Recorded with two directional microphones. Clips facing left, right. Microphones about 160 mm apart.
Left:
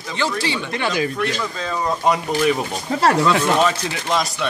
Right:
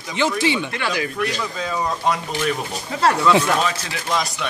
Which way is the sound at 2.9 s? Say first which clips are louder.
Left 4 dB; 35° left (ahead or behind).